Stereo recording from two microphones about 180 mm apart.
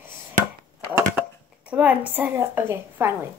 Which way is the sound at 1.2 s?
10° right (ahead or behind).